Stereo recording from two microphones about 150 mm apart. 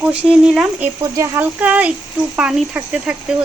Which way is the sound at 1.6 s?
10° right (ahead or behind).